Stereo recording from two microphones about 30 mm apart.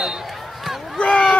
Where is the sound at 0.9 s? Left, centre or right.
Left.